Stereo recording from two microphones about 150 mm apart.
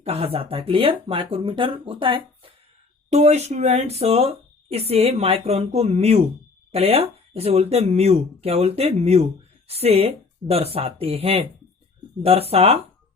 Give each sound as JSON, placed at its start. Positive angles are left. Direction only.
{"t": 0.0, "sound": "speech", "side_deg": -40}
{"t": 3.1, "sound": "speech", "side_deg": -45}